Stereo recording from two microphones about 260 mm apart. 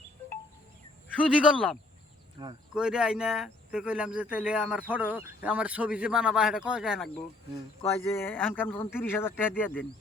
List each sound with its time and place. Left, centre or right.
1.0 s speech: centre
2.4 s speech: centre
2.7 s speech: centre
8.1 s speech: centre